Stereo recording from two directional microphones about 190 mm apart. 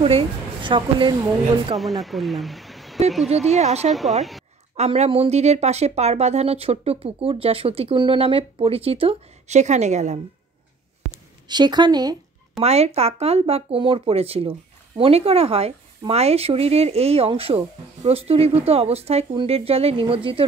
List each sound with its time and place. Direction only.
0.0 s speech: 30° right (ahead or behind)
1.8 s speech: centre (ahead or behind)
3.3 s speech: 35° right (ahead or behind)
4.2 s a woman's voice: centre (ahead or behind)
4.7 s speech: 35° right (ahead or behind)
11.4 s speech: 25° right (ahead or behind)
12.6 s speech: 35° right (ahead or behind)